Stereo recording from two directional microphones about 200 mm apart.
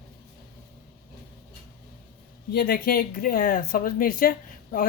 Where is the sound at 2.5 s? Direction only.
50° left (ahead or behind).